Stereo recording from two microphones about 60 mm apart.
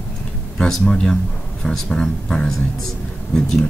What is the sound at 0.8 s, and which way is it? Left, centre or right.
Speech, centre.